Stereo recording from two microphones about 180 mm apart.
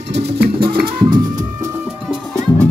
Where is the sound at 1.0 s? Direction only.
25° right (ahead or behind).